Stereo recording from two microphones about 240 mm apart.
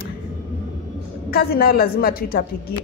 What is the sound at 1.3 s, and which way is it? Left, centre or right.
A woman's voice, left.